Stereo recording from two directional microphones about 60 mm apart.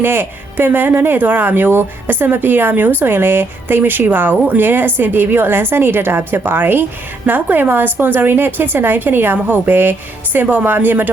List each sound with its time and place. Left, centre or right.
0.0 s speech: right